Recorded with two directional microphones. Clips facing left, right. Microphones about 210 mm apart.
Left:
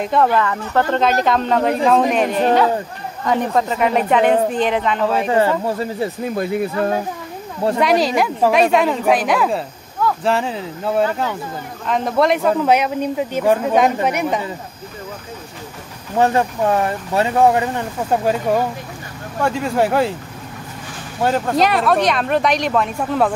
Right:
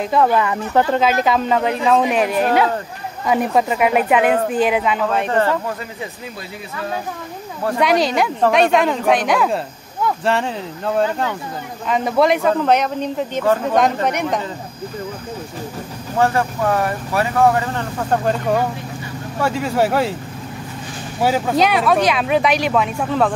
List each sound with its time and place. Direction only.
0.0 s speech: centre (ahead or behind)
0.4 s speech: 15° right (ahead or behind); by 5.6 s 10° left (ahead or behind)
5.7 s speech: 35° left (ahead or behind)
6.2 s speech: 50° left (ahead or behind)
7.8 s speech: centre (ahead or behind)
16.2 s speech: 20° left (ahead or behind)
18.1 s speech: 5° left (ahead or behind)
21.2 s speech: 5° right (ahead or behind)